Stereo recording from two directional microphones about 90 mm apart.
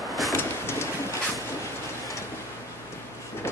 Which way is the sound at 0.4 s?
30° left (ahead or behind).